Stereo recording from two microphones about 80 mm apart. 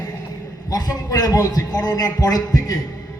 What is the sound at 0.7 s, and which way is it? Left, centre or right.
A man's voice, left.